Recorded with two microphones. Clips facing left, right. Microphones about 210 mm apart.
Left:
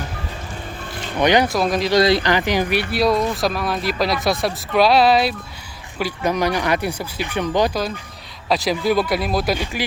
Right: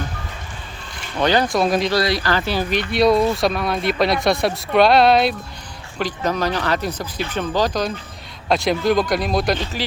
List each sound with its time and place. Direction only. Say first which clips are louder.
1.2 s speech: left 2 dB; 15° left (ahead or behind)
1.5 s speech: right 1 dB; centre (ahead or behind)
1.9 s speech: left 4 dB; 25° left (ahead or behind); by 9.8 s 10° left (ahead or behind)